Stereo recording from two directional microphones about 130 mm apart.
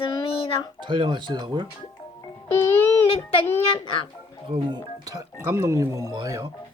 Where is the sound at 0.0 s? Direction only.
45° left (ahead or behind).